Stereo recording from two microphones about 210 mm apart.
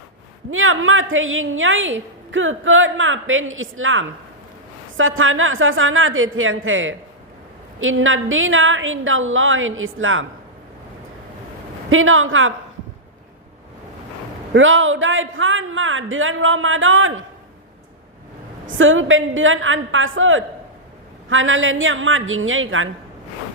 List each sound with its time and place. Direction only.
0.5 s a woman's voice: 75° right (ahead or behind)
11.9 s a woman's voice: 75° right (ahead or behind)
14.5 s a woman's voice: 65° right (ahead or behind)
18.6 s a woman's voice: 70° right (ahead or behind)